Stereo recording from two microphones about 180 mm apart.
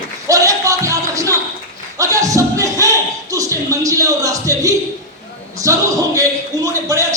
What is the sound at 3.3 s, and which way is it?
A man's voice, 20° right (ahead or behind).